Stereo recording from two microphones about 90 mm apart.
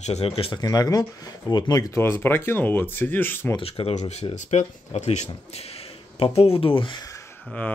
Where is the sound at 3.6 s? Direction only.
90° left.